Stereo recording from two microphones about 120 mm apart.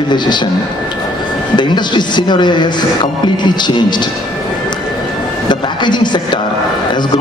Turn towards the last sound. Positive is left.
turn(degrees=40)  # may be behind; listen again after turning